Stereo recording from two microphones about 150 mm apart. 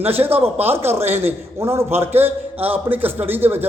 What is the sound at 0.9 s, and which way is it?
Speech, 45° right (ahead or behind).